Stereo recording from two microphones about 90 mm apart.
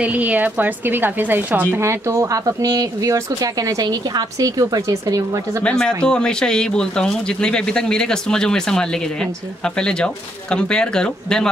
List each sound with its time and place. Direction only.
0.0 s a woman's voice: 15° right (ahead or behind)
1.7 s speech: 35° right (ahead or behind)
5.6 s speech: 10° left (ahead or behind)